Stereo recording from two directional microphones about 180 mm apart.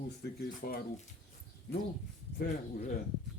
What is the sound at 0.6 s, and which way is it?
Speech, 60° left (ahead or behind).